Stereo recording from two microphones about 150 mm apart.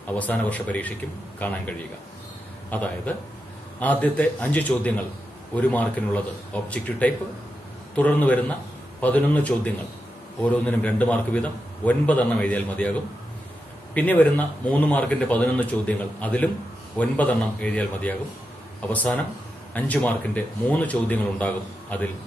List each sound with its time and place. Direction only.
0.1 s a man's voice: 10° left (ahead or behind)
13.9 s a man's voice: 10° left (ahead or behind)